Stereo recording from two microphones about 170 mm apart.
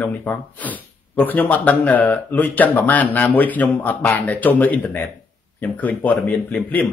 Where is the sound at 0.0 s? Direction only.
10° left (ahead or behind).